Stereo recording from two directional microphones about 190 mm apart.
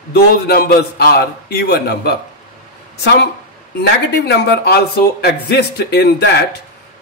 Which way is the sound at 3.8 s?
60° left (ahead or behind).